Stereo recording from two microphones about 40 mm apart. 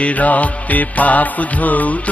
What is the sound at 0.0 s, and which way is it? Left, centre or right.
Music, left.